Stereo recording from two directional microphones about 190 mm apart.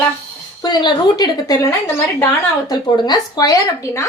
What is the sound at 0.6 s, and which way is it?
A woman's voice, 20° left (ahead or behind).